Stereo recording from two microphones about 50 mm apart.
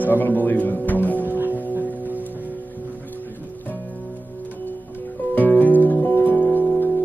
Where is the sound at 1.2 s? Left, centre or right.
Right.